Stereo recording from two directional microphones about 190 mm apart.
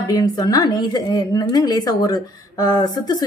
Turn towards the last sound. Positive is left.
turn(degrees=20)  # may be behind; listen again after turning